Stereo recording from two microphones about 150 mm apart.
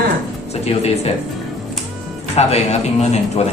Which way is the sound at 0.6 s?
45° left (ahead or behind).